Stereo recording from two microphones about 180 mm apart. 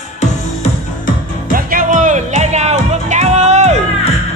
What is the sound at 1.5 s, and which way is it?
Music, 50° right (ahead or behind).